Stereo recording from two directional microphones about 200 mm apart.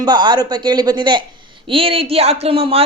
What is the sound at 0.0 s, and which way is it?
Speech, 20° right (ahead or behind).